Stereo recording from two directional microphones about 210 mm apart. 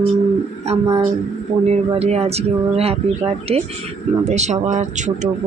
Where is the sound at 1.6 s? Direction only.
30° right (ahead or behind).